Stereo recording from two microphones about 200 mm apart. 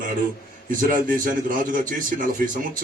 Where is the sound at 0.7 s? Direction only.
45° right (ahead or behind).